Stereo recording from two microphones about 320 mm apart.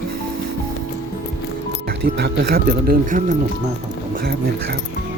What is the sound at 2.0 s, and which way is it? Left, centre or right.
Speech, right.